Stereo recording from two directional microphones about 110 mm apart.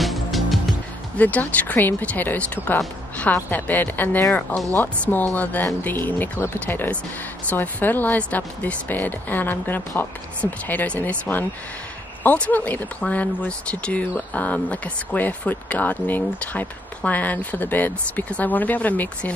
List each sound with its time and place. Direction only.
0.0 s music: centre (ahead or behind)
1.1 s speech: 15° left (ahead or behind)